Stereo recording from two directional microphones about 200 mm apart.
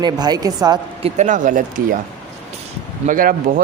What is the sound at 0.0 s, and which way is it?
A woman's voice, 20° right (ahead or behind).